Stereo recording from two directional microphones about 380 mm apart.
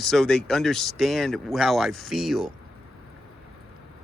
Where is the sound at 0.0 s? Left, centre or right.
Centre.